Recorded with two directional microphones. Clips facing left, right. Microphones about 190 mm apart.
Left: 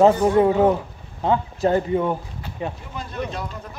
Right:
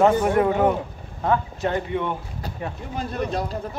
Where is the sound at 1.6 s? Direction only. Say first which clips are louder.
Left 6 dB; 35° left (ahead or behind).